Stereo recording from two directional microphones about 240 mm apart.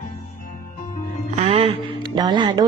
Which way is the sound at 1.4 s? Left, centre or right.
Right.